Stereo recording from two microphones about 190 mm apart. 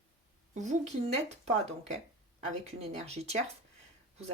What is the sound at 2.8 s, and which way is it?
Speech, 35° right (ahead or behind).